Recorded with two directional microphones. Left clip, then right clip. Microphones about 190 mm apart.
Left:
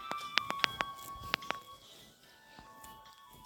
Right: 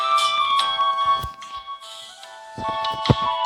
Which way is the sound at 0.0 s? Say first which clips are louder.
Right 18 dB; 45° right (ahead or behind).